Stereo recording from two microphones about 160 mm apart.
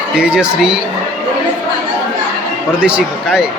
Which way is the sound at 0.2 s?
5° right (ahead or behind).